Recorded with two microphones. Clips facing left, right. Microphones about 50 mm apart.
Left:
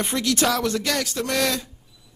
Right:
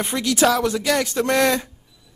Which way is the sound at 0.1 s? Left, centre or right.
Right.